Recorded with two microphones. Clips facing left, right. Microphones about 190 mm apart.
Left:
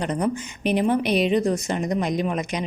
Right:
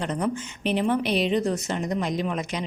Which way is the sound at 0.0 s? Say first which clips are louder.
Left 3 dB; 15° left (ahead or behind).